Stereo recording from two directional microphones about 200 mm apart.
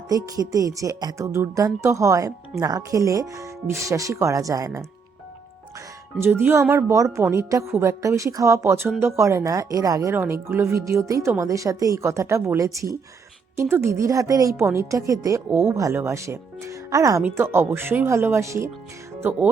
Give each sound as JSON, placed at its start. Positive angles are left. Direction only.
{"t": 0.3, "sound": "a woman's voice", "side_deg": -15}
{"t": 6.1, "sound": "a woman's voice", "side_deg": -10}